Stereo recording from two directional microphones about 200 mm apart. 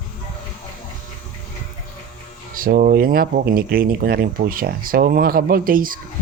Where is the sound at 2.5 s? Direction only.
45° right (ahead or behind).